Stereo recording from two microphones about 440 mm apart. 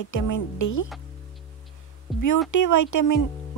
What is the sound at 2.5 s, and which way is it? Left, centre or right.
Speech, left.